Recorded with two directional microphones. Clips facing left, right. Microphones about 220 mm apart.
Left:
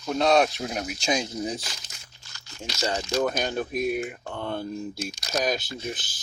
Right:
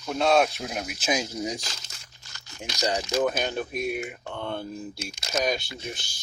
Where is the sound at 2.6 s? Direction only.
15° right (ahead or behind).